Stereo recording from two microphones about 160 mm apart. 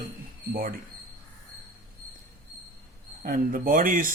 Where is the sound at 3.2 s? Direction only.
60° right (ahead or behind).